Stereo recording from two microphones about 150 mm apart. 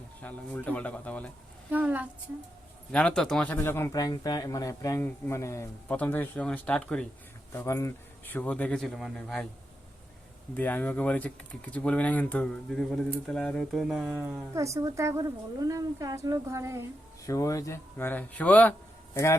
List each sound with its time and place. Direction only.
0.2 s speech: 10° left (ahead or behind)
1.7 s a woman's voice: 10° right (ahead or behind)
2.9 s speech: 5° left (ahead or behind)
7.5 s speech: 20° left (ahead or behind); by 9.5 s 5° left (ahead or behind)
10.5 s speech: 10° left (ahead or behind); by 14.4 s 5° right (ahead or behind)
14.5 s a woman's voice: 20° right (ahead or behind)
17.2 s a man's voice: 20° left (ahead or behind)